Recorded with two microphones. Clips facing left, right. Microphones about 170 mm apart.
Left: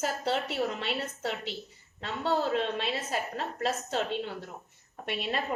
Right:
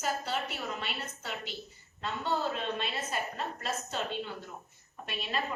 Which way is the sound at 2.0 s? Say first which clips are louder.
Left 3 dB; 80° left.